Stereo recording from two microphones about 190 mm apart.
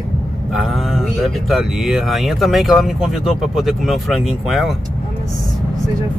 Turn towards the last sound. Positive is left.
turn(degrees=0)  # may be behind; listen again after turning